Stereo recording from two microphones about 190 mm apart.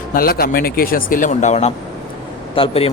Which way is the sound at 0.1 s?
50° left (ahead or behind).